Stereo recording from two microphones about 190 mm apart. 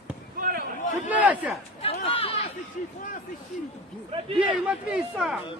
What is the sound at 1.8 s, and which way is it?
Speech, 30° left (ahead or behind).